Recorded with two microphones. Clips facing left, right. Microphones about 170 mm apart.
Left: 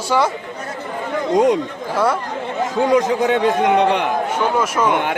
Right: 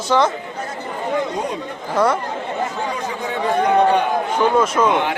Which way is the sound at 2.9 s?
90° left.